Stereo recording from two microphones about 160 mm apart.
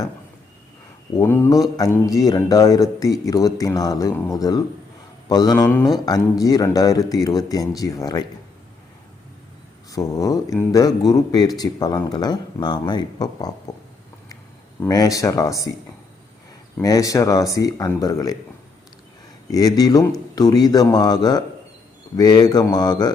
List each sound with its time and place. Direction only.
1.2 s speech: 15° left (ahead or behind)
5.5 s speech: 10° left (ahead or behind)
6.1 s speech: 25° left (ahead or behind)
9.9 s speech: 20° left (ahead or behind)
14.8 s speech: 20° left (ahead or behind)
16.8 s speech: 20° left (ahead or behind)
19.5 s speech: 25° left (ahead or behind)